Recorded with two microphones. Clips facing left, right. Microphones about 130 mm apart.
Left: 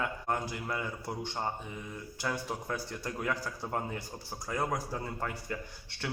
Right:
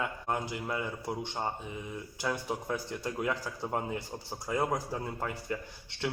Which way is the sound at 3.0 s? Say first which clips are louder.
Right 1 dB; 20° right (ahead or behind).